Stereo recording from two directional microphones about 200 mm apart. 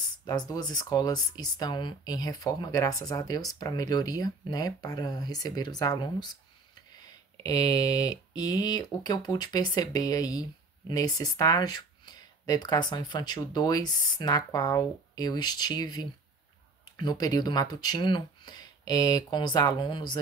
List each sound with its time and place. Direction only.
0.5 s speech: 20° left (ahead or behind)
7.4 s speech: 20° left (ahead or behind)